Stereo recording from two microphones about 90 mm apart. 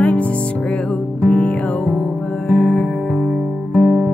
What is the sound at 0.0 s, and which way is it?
Music, 15° left (ahead or behind).